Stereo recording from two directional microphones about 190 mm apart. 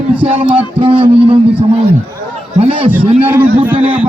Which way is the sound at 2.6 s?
30° right (ahead or behind).